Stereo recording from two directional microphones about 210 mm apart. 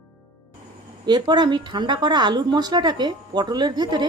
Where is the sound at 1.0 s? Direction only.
20° right (ahead or behind).